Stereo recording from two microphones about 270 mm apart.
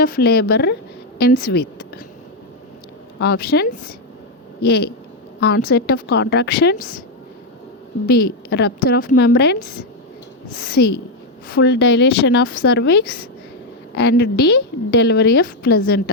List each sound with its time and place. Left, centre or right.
0.0 s a woman's voice: left
3.2 s a woman's voice: left
8.0 s a woman's voice: left